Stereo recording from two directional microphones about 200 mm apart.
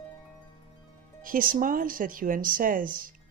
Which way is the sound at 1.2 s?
45° right (ahead or behind).